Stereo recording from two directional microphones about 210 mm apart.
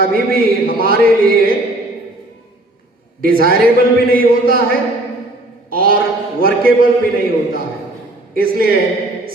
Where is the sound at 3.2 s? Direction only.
45° right (ahead or behind).